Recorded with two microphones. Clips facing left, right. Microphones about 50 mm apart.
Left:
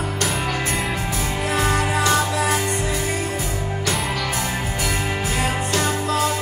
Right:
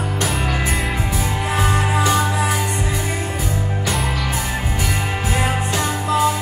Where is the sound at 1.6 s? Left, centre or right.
Centre.